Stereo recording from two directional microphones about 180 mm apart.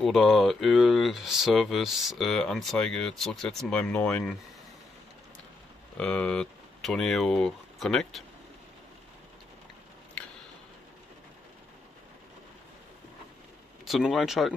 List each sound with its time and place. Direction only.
0.0 s speech: centre (ahead or behind)
5.9 s speech: 5° left (ahead or behind)
13.8 s speech: centre (ahead or behind)